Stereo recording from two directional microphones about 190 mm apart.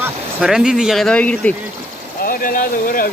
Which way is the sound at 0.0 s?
5° right (ahead or behind).